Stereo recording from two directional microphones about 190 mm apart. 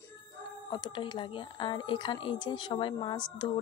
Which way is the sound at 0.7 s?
20° left (ahead or behind).